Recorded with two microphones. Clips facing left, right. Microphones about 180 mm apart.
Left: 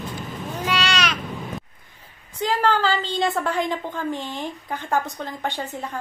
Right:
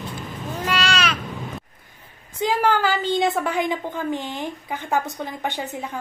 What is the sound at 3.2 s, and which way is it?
A woman's voice, 15° right (ahead or behind).